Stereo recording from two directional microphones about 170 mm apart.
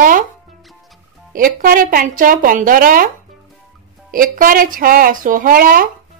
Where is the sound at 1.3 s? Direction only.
55° right (ahead or behind).